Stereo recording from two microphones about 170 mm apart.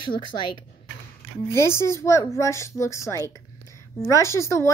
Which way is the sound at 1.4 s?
15° left (ahead or behind).